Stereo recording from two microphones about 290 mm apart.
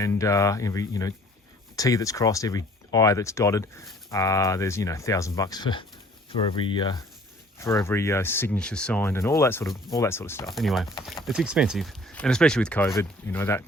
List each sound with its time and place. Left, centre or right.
0.0 s speech: centre